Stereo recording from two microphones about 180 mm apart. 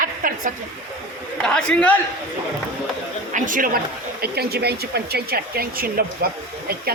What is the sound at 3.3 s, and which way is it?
Speech, 45° right (ahead or behind).